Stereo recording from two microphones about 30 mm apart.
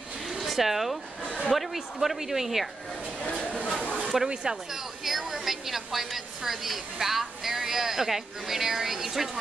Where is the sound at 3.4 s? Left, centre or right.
Left.